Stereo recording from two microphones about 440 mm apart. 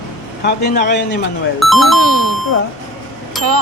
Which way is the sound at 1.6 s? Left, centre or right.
Centre.